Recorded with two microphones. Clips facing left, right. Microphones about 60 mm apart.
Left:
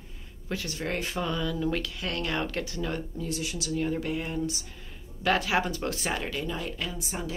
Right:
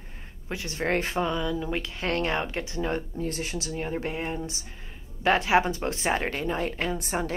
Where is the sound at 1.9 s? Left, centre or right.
Right.